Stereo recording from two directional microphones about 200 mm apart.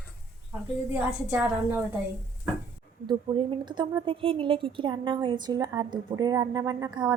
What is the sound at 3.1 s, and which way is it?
A woman's voice, 25° right (ahead or behind).